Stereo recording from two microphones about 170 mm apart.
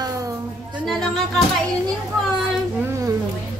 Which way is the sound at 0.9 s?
Centre (ahead or behind).